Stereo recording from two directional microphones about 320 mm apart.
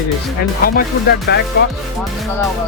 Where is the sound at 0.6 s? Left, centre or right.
Left.